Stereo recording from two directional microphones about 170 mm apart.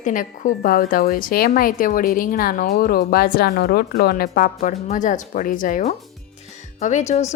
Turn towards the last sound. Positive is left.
turn(degrees=40)  # may be behind; listen again after turning